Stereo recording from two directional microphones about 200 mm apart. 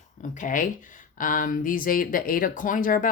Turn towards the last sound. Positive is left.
turn(degrees=45)  # may be behind; listen again after turning